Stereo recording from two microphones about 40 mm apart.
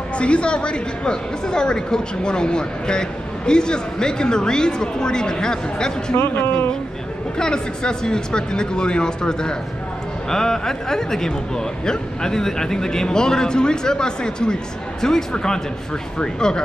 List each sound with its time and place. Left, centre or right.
0.2 s a woman's voice: left
6.1 s speech: left
7.3 s a woman's voice: centre